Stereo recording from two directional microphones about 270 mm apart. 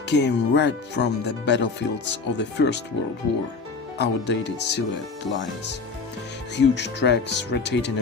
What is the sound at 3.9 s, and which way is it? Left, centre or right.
Speech, left.